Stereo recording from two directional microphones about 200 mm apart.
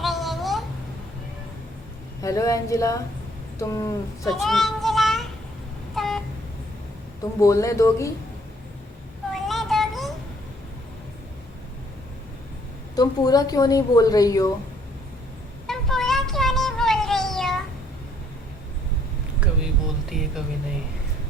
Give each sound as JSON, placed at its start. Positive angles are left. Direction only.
{"t": 0.0, "sound": "babbling", "side_deg": 0}
{"t": 2.2, "sound": "speech", "side_deg": 15}
{"t": 4.3, "sound": "child singing", "side_deg": 0}
{"t": 5.9, "sound": "a sound", "side_deg": 0}
{"t": 7.2, "sound": "speech", "side_deg": 15}
{"t": 9.3, "sound": "a sound", "side_deg": 0}
{"t": 13.0, "sound": "a woman's voice", "side_deg": 20}
{"t": 15.6, "sound": "a sound", "side_deg": 0}
{"t": 20.1, "sound": "speech", "side_deg": 0}